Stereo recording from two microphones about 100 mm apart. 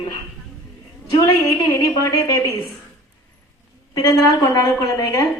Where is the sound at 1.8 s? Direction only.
40° left (ahead or behind).